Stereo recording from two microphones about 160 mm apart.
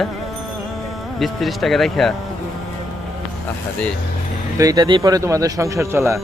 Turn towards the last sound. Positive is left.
turn(degrees=-20)  # may be behind; listen again after turning